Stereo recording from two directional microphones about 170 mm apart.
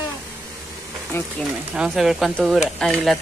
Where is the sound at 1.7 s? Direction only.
5° right (ahead or behind).